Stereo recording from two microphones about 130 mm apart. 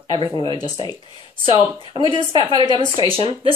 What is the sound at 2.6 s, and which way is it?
Speech, 35° right (ahead or behind).